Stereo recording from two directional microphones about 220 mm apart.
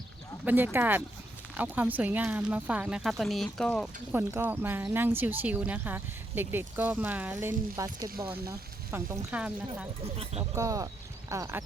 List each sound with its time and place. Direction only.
0.4 s speech: 10° right (ahead or behind)
4.1 s speech: 10° right (ahead or behind)
10.0 s speech: 25° right (ahead or behind)
10.5 s speech: 15° right (ahead or behind)